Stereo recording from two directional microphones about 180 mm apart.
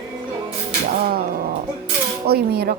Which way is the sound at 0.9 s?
55° right (ahead or behind).